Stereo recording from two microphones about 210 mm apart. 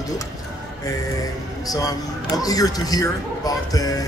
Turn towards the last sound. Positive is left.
turn(degrees=15)  # may be behind; listen again after turning